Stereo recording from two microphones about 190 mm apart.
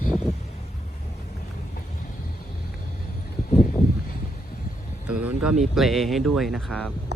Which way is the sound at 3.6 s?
50° left (ahead or behind).